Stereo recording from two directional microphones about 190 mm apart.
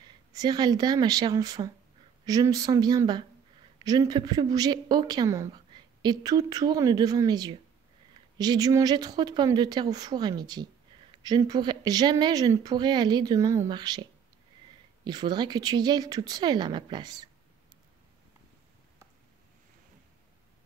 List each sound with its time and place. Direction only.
0.3 s speech: 20° right (ahead or behind)
15.0 s speech: 20° right (ahead or behind)